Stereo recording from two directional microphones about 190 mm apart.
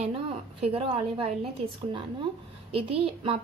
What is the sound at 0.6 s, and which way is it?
A woman's voice, 30° right (ahead or behind).